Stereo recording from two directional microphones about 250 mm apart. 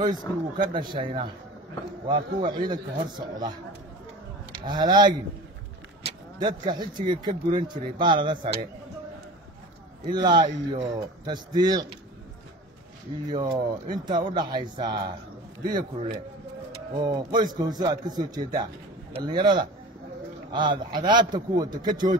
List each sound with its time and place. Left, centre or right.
0.0 s speech: centre
4.6 s speech: centre
6.4 s speech: centre
10.0 s speech: centre
13.3 s speech: centre